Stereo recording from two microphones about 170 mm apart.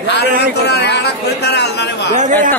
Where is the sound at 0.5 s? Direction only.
80° left.